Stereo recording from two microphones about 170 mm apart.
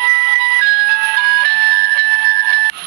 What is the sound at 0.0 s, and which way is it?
Music, 65° right (ahead or behind).